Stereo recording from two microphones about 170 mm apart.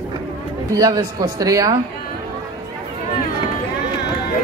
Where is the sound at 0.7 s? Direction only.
20° right (ahead or behind).